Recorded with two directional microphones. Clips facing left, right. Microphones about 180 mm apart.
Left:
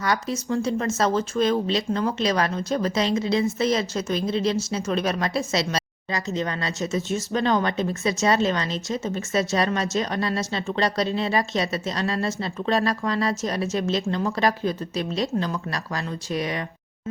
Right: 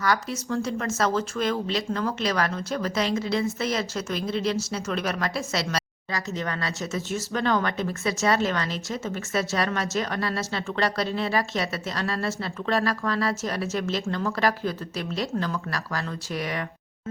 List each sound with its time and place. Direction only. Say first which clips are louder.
0.0 s speech: left 1 dB; 20° left (ahead or behind)